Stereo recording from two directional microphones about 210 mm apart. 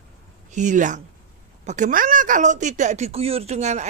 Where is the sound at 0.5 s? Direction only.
35° right (ahead or behind).